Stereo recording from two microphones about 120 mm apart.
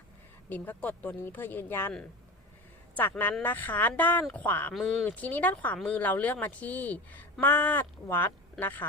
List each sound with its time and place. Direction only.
0.5 s speech: 15° left (ahead or behind)
2.9 s speech: 15° left (ahead or behind)
4.7 s speech: centre (ahead or behind)
5.0 s speech: 15° left (ahead or behind)